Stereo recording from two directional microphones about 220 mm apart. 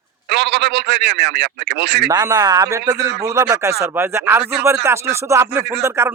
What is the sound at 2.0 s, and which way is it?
Speech, 15° right (ahead or behind).